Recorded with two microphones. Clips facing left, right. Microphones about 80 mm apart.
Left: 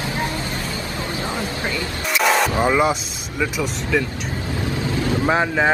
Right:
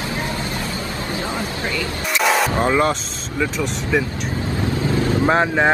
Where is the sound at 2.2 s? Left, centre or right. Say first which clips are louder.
Even; centre.